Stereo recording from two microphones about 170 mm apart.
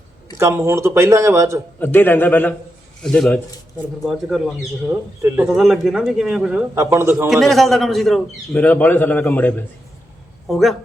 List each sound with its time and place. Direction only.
0.3 s speech: 15° right (ahead or behind)
1.8 s a man's voice: 10° left (ahead or behind)
5.2 s speech: 15° right (ahead or behind)
5.5 s speech: centre (ahead or behind)
6.7 s speech: 15° right (ahead or behind)
7.3 s a man's voice: centre (ahead or behind)